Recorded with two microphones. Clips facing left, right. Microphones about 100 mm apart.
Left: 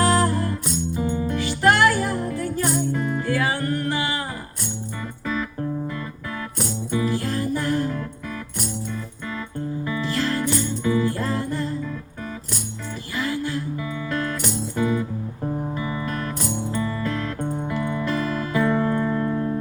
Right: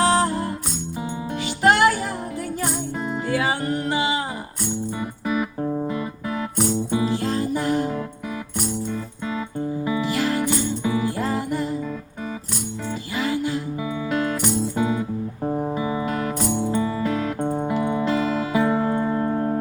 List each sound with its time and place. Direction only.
0.0 s music: 25° right (ahead or behind)
5.6 s music: 30° right (ahead or behind)
9.8 s music: 15° right (ahead or behind)
13.1 s music: 20° right (ahead or behind)
19.3 s music: 40° right (ahead or behind)